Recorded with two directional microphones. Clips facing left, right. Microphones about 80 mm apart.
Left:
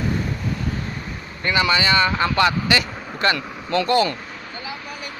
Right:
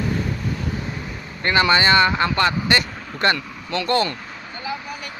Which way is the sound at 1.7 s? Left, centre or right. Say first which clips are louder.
Right 4 dB; right.